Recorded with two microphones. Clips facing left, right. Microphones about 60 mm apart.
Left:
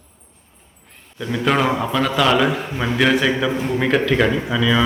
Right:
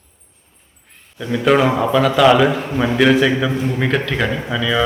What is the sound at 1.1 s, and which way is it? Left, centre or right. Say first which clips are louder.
A man's voice: right 4 dB; centre.